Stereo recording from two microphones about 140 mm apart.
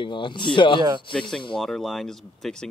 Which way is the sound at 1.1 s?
5° left (ahead or behind).